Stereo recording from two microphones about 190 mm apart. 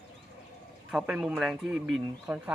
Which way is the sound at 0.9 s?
5° right (ahead or behind).